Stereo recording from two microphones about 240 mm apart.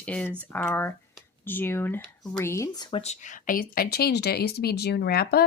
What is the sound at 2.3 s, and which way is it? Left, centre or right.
Speech, centre.